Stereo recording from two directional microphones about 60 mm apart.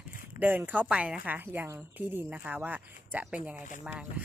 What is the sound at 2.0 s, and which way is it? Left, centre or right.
A woman's voice, right.